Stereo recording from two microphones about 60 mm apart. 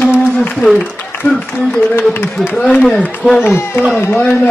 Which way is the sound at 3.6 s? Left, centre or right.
Left.